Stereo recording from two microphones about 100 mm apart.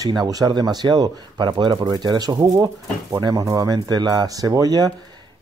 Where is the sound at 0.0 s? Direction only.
40° right (ahead or behind).